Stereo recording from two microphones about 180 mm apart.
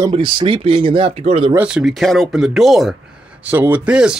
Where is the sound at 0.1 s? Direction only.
30° right (ahead or behind).